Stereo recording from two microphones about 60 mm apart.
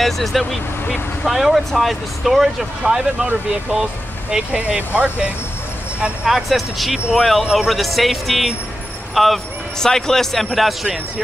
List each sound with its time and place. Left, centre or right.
0.0 s speech: centre
4.6 s speech: right
6.2 s speech: centre